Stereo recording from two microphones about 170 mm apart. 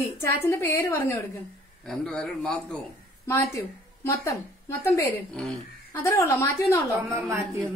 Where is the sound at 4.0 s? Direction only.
15° left (ahead or behind).